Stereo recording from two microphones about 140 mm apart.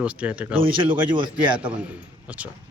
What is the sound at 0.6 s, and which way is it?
Speech, 35° right (ahead or behind).